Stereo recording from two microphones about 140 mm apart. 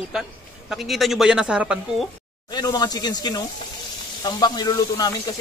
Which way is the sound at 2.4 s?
30° left (ahead or behind).